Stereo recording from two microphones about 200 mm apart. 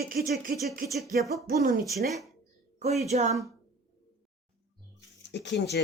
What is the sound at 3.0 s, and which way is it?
Speech, 35° right (ahead or behind).